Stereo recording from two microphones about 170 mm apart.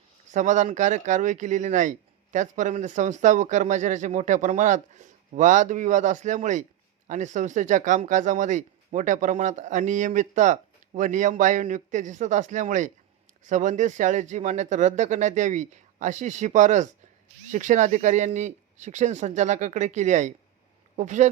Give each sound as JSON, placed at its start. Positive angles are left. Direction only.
{"t": 0.3, "sound": "speech", "side_deg": -45}